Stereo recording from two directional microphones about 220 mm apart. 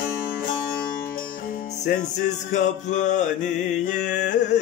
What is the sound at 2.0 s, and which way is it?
Mantra, 35° left (ahead or behind).